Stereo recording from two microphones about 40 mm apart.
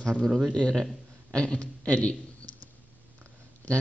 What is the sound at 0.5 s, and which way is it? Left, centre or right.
A man's voice, centre.